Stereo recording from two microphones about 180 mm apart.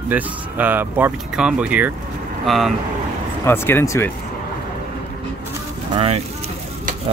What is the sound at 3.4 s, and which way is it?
Speech, 15° left (ahead or behind).